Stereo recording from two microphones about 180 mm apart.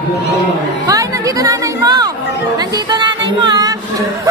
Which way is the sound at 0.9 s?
20° right (ahead or behind).